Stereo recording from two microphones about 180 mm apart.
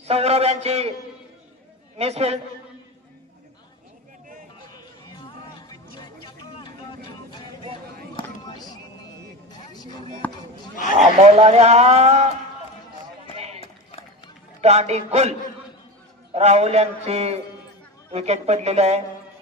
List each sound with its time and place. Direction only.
0.0 s a man's voice: 35° right (ahead or behind)
2.0 s a man's voice: 35° right (ahead or behind)
5.1 s a sound: 25° left (ahead or behind)
8.5 s music: 25° left (ahead or behind)
11.0 s a man's voice: 35° right (ahead or behind)
13.6 s run: 35° left (ahead or behind)
14.6 s a man's voice: 35° right (ahead or behind)
16.3 s a man's voice: 35° right (ahead or behind)